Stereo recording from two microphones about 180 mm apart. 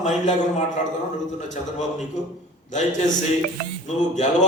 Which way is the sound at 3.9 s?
40° left (ahead or behind).